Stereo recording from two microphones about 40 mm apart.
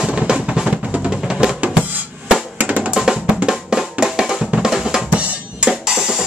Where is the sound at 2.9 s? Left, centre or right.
Centre.